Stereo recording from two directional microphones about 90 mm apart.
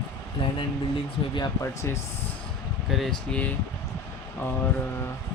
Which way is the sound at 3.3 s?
15° left (ahead or behind).